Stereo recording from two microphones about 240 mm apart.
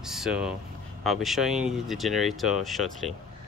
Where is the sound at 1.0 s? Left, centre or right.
Centre.